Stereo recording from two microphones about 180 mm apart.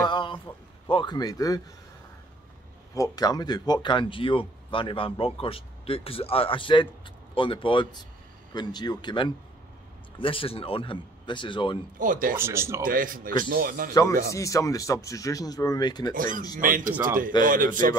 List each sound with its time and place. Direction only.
0.0 s a sound: 25° left (ahead or behind)
0.8 s speech: 25° left (ahead or behind)
2.9 s speech: 20° left (ahead or behind)
12.0 s a man's voice: 50° right (ahead or behind)
12.4 s speech: 15° right (ahead or behind)
12.8 s a man's voice: 50° right (ahead or behind)
14.3 s speech: 15° left (ahead or behind)
16.1 s a man's voice: 50° right (ahead or behind)